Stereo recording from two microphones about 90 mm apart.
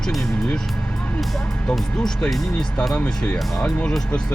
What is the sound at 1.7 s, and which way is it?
Speech, 10° left (ahead or behind).